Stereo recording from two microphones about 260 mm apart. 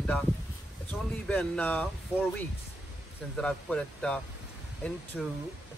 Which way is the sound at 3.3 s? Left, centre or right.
Centre.